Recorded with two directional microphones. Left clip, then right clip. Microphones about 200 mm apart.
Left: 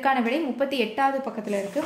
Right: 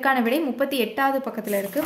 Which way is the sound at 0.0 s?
15° right (ahead or behind).